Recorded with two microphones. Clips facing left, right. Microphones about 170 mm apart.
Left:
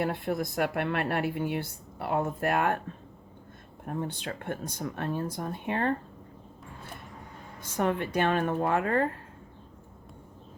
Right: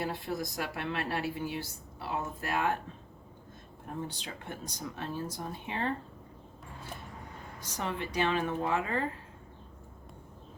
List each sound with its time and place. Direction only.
0.0 s a woman's voice: 55° left (ahead or behind)
3.8 s a woman's voice: 55° left (ahead or behind)
7.6 s speech: 55° left (ahead or behind)